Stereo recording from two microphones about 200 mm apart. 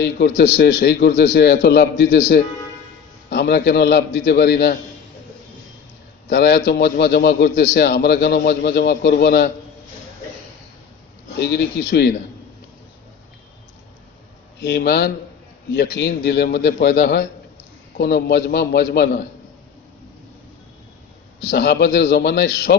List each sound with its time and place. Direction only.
0.0 s a man's voice: 55° left (ahead or behind)
6.2 s a man's voice: 55° left (ahead or behind)
11.3 s a man's voice: 60° left (ahead or behind)
14.6 s a man's voice: 55° left (ahead or behind)
21.4 s a man's voice: 55° left (ahead or behind)